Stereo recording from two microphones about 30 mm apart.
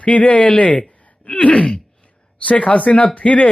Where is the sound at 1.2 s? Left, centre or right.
Left.